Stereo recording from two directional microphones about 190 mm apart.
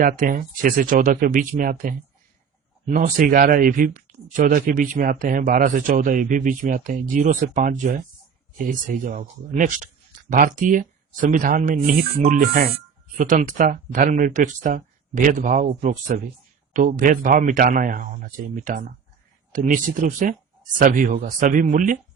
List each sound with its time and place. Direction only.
0.0 s speech: 45° right (ahead or behind)